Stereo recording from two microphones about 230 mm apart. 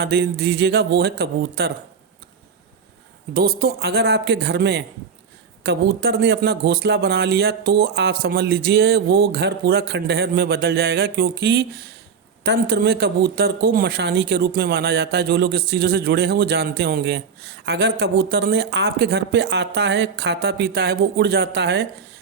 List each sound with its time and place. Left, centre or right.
0.0 s a man's voice: right
3.3 s a man's voice: right